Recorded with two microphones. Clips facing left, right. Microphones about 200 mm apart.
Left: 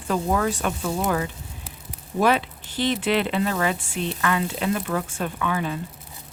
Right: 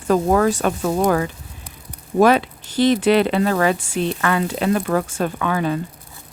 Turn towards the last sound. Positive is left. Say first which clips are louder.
# right 5 dB
turn(degrees=-50)  # may be behind; listen again after turning